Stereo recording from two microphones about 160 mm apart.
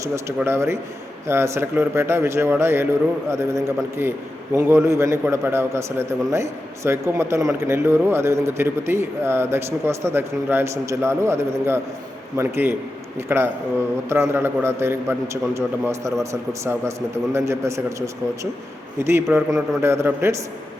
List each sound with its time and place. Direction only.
0.3 s a man's voice: 15° right (ahead or behind)